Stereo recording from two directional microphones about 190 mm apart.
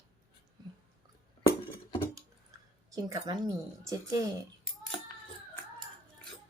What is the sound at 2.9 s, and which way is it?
A woman's voice, 20° right (ahead or behind).